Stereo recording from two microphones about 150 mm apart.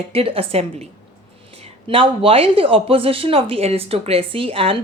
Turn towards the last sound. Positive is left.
turn(degrees=-40)  # may be behind; listen again after turning